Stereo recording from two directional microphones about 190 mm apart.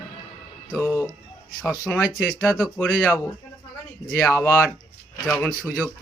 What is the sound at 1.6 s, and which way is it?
Speech, 5° left (ahead or behind).